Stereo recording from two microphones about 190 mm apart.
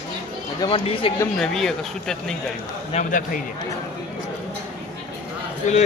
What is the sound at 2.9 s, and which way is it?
Speech, 45° left (ahead or behind).